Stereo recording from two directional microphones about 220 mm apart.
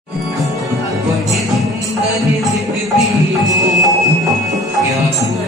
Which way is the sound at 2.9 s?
15° right (ahead or behind).